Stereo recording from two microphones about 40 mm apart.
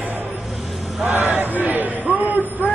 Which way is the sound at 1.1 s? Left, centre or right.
Right.